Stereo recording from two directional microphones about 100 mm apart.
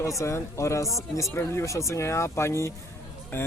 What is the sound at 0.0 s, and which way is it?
Speech, 30° left (ahead or behind).